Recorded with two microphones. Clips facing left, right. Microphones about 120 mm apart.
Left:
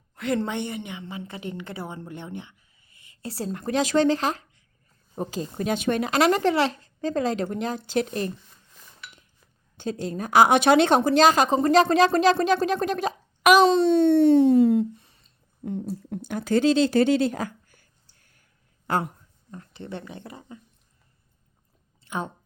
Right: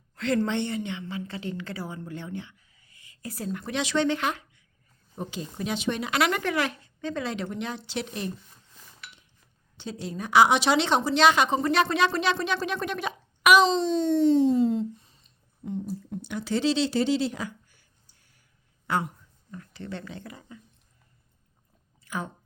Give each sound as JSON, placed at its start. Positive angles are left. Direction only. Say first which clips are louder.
{"t": 0.2, "sound": "a woman's voice", "louder": "right 1 dB", "side_deg": 15}
{"t": 3.6, "sound": "speech", "louder": "left 5 dB", "side_deg": 45}
{"t": 9.7, "sound": "a woman's voice", "louder": "left 5 dB", "side_deg": 50}
{"t": 13.6, "sound": "speech", "louder": "left 5 dB", "side_deg": 60}
{"t": 16.3, "sound": "a sound", "louder": "left 5 dB", "side_deg": 50}
{"t": 18.9, "sound": "speech", "louder": "left 2 dB", "side_deg": 45}
{"t": 19.5, "sound": "speech", "louder": "left 1 dB", "side_deg": 25}
{"t": 22.0, "sound": "a sound", "louder": "left 3 dB", "side_deg": 25}